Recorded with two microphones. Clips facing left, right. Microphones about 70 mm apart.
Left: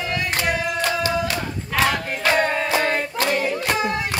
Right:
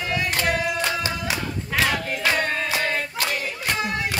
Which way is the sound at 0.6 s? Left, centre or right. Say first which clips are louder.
Left 2 dB; centre.